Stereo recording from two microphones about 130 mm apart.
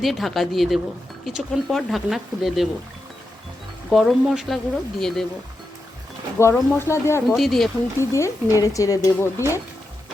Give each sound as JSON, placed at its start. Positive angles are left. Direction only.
{"t": 0.0, "sound": "speech", "side_deg": 0}
{"t": 3.8, "sound": "speech", "side_deg": 0}
{"t": 6.4, "sound": "speech", "side_deg": 20}
{"t": 7.3, "sound": "speech", "side_deg": 0}
{"t": 7.9, "sound": "speech", "side_deg": 20}